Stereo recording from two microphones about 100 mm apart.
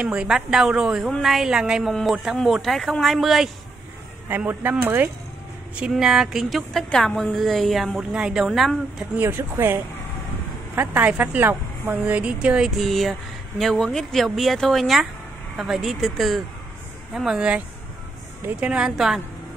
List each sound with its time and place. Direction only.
0.0 s a woman's voice: 10° right (ahead or behind)
4.5 s speech: 20° right (ahead or behind)
5.8 s a woman's voice: 5° right (ahead or behind)
9.1 s speech: 20° right (ahead or behind)
10.8 s a woman's voice: 20° right (ahead or behind)